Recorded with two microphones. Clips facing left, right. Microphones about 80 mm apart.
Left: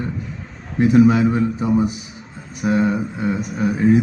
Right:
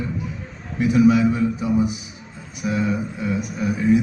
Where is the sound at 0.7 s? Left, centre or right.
Left.